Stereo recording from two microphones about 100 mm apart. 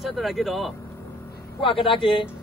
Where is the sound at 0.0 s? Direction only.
Centre (ahead or behind).